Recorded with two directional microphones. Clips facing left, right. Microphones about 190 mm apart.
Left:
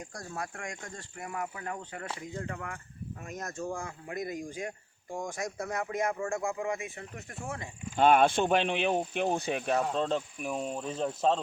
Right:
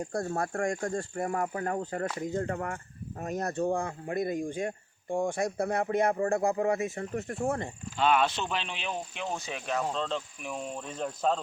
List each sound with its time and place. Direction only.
0.1 s speech: 55° right (ahead or behind); by 3.5 s 35° right (ahead or behind)
3.5 s speech: 60° right (ahead or behind)
3.8 s speech: 35° right (ahead or behind); by 7.7 s 55° right (ahead or behind)
7.9 s speech: 50° left (ahead or behind)
10.5 s speech: 5° left (ahead or behind)